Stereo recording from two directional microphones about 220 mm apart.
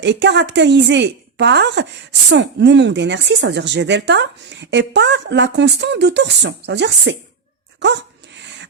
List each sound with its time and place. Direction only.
0.0 s speech: 50° right (ahead or behind)
8.4 s rub: 55° right (ahead or behind)